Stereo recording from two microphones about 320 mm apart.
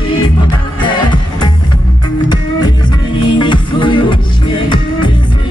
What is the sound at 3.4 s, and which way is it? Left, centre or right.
Music, centre.